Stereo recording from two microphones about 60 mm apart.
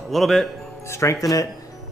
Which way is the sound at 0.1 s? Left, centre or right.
Centre.